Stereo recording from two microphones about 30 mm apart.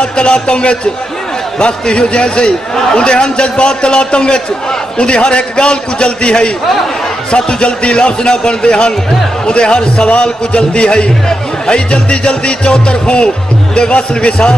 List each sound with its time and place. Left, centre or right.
0.0 s a man's voice: left
11.9 s a man's voice: left